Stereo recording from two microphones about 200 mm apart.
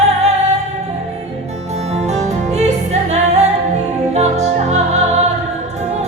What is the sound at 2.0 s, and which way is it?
Music, 35° right (ahead or behind).